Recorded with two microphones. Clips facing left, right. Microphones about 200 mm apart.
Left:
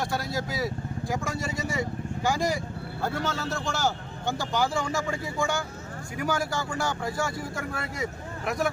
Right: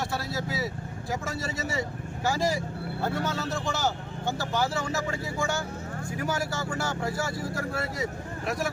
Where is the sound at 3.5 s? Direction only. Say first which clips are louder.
Left 1 dB; centre (ahead or behind).